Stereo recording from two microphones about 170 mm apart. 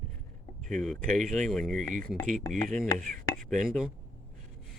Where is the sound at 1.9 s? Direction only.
55° right (ahead or behind).